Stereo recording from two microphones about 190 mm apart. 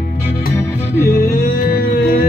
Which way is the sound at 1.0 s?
50° left (ahead or behind).